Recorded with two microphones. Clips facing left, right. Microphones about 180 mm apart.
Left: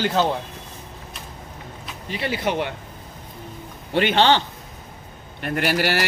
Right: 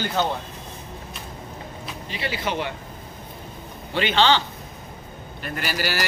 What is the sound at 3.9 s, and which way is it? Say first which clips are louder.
Speech: left 2 dB; 55° left (ahead or behind).